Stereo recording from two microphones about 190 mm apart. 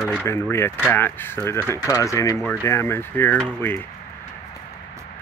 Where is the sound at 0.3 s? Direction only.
15° left (ahead or behind).